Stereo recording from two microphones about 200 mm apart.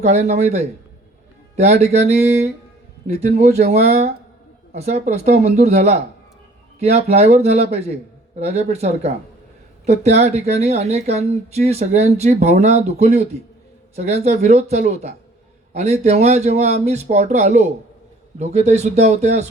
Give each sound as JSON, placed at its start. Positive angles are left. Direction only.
{"t": 0.0, "sound": "speech", "side_deg": -35}